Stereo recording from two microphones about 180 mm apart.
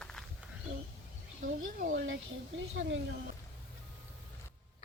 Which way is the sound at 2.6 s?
90° right.